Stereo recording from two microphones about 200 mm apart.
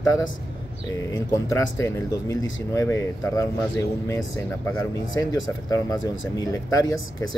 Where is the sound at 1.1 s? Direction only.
15° left (ahead or behind).